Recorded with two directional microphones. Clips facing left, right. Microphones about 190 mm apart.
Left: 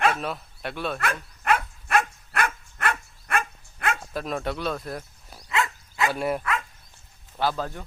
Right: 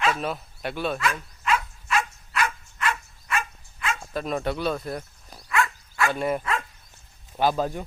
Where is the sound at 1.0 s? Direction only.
60° left (ahead or behind).